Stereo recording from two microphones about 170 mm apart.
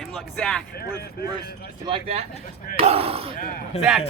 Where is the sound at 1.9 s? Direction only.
35° right (ahead or behind).